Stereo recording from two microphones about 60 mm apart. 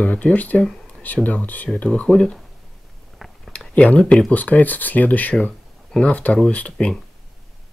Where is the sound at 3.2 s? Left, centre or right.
Centre.